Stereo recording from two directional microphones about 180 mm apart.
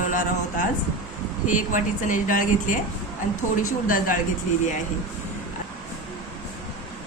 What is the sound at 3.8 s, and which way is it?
Speech, 50° left (ahead or behind).